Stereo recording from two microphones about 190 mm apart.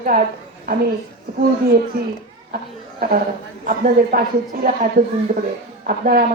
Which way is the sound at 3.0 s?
55° right (ahead or behind).